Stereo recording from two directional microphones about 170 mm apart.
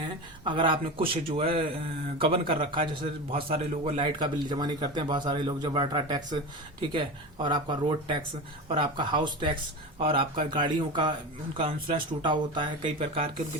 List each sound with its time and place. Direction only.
0.0 s a man's voice: 30° right (ahead or behind)